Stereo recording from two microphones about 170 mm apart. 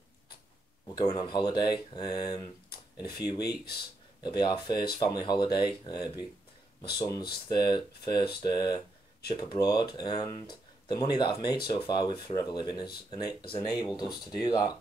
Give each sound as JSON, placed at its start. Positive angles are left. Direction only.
{"t": 0.8, "sound": "speech", "side_deg": 25}